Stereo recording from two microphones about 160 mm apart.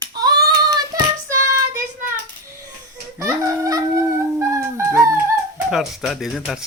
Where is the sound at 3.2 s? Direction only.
20° right (ahead or behind).